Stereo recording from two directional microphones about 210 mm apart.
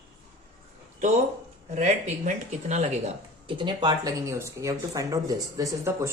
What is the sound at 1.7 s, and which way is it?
Speech, 35° right (ahead or behind).